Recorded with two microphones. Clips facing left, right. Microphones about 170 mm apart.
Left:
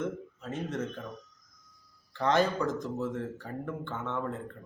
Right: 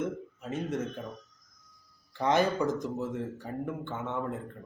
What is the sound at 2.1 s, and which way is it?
Speech, 15° right (ahead or behind).